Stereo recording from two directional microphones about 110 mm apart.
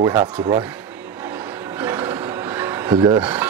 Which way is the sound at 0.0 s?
30° right (ahead or behind).